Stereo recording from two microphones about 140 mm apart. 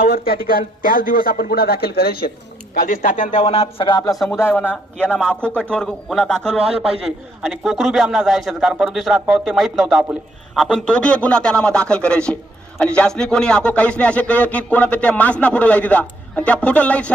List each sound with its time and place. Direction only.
0.0 s speech: 90° left; by 3.2 s 75° left (ahead or behind)
3.4 s speech: 45° left (ahead or behind)
4.1 s a man's voice: centre (ahead or behind)
4.4 s speech: 15° left (ahead or behind)
7.4 s a man's voice: centre (ahead or behind)